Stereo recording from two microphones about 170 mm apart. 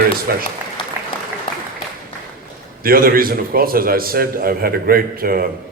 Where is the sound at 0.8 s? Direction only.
30° left (ahead or behind).